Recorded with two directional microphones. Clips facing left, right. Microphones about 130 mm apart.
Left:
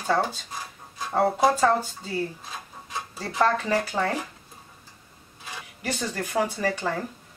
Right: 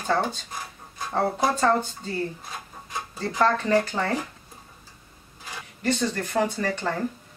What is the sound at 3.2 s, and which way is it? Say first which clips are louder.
Speech: right 1 dB; 10° left (ahead or behind).